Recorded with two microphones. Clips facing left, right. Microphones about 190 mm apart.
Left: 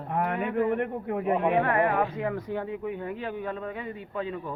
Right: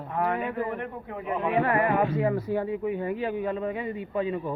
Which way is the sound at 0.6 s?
60° left (ahead or behind).